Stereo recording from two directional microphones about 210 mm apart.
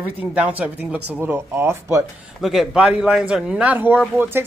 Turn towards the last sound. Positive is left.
turn(degrees=-10)  # may be behind; listen again after turning